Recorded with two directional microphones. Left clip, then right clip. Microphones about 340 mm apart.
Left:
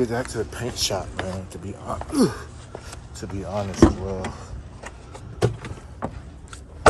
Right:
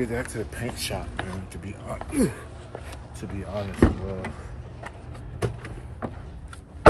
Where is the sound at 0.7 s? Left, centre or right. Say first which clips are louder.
Left 8 dB; centre.